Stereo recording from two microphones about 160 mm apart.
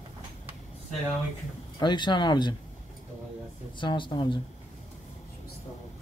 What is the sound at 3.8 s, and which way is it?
Speech, 30° left (ahead or behind).